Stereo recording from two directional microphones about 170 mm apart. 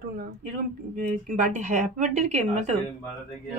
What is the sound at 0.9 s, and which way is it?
Speech, 55° right (ahead or behind).